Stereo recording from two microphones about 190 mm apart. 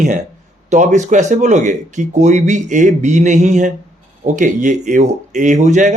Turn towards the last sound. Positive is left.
turn(degrees=-40)  # may be behind; listen again after turning